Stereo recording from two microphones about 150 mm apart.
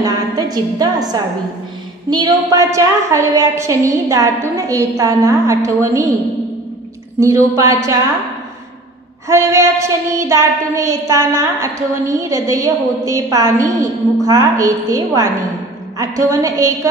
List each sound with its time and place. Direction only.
0.0 s a woman's voice: 25° right (ahead or behind)
2.0 s child singing: 25° right (ahead or behind)
7.2 s child singing: 20° right (ahead or behind)
9.3 s child singing: 20° right (ahead or behind)